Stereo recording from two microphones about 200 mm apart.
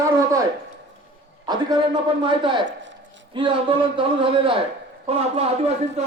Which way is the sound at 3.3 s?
25° right (ahead or behind).